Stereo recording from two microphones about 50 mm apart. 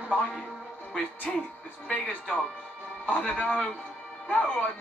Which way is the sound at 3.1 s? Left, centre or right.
Left.